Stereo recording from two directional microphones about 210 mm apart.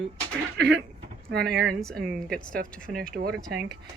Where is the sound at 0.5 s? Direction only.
55° right (ahead or behind).